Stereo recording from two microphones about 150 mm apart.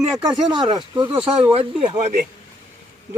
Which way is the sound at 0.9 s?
35° right (ahead or behind).